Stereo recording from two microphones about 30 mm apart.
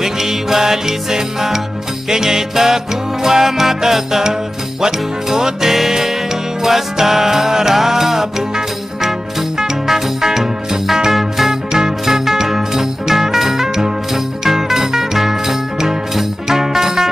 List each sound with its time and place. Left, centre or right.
0.0 s music: centre